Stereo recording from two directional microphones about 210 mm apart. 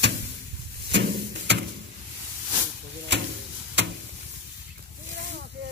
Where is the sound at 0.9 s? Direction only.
55° right (ahead or behind).